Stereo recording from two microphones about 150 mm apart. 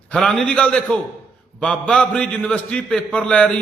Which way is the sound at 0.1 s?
5° left (ahead or behind).